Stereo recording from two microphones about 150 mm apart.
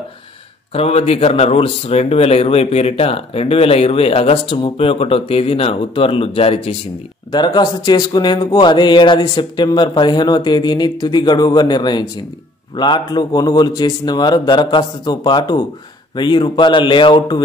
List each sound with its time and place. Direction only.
0.7 s speech: 45° left (ahead or behind)
7.2 s speech: 30° left (ahead or behind)